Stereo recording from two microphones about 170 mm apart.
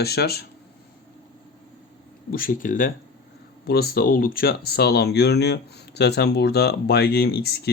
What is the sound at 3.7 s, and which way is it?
Speech, 65° left (ahead or behind).